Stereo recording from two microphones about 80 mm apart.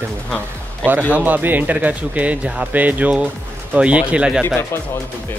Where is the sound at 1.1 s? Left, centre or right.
Right.